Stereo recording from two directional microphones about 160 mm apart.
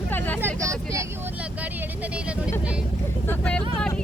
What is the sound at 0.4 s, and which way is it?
Vehicle, 20° right (ahead or behind).